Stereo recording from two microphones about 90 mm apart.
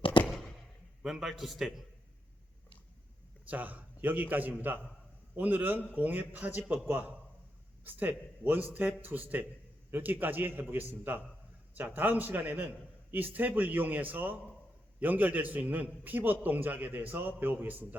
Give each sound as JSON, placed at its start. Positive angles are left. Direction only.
{"t": 0.3, "sound": "a sound", "side_deg": 5}
{"t": 1.0, "sound": "a man's voice", "side_deg": 0}
{"t": 3.5, "sound": "a man's voice", "side_deg": -15}